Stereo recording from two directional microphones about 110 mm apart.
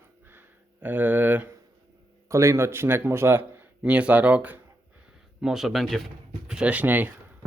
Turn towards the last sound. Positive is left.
turn(degrees=-15)  # may be behind; listen again after turning